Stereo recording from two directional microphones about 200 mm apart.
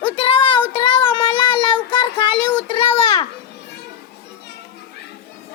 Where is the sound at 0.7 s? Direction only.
25° left (ahead or behind).